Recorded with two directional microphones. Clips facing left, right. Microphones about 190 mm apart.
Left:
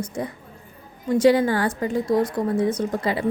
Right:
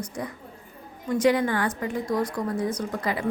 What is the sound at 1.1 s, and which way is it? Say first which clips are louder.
A woman's voice: left 5 dB; 30° left (ahead or behind).